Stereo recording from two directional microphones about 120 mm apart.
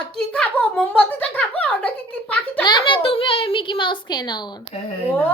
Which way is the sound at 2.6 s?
40° left (ahead or behind).